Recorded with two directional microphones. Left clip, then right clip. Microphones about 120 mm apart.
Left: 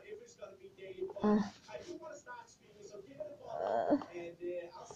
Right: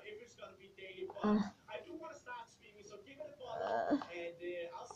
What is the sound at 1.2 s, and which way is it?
Speech, 20° left (ahead or behind).